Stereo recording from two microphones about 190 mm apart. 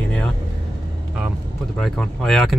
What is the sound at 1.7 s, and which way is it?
Speech, centre (ahead or behind).